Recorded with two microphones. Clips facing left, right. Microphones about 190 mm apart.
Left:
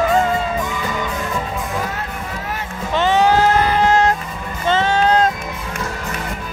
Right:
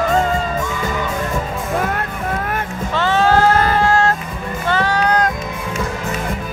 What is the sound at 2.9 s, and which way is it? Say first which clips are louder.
Music: even; 15° left (ahead or behind).